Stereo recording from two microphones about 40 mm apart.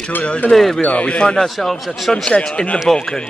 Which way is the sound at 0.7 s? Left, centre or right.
Left.